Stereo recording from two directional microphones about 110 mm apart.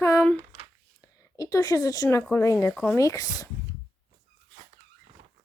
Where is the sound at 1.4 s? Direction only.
35° left (ahead or behind).